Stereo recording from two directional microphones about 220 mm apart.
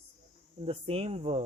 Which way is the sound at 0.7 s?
25° right (ahead or behind).